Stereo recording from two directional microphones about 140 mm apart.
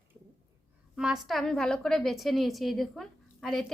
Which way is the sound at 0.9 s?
5° right (ahead or behind).